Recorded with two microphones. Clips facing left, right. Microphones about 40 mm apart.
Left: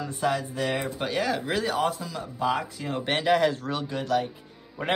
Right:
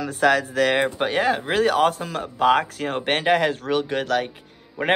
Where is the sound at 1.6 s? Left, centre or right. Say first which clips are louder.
Right 7 dB; right.